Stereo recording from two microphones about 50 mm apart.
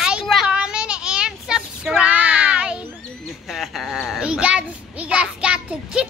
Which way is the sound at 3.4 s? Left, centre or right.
Centre.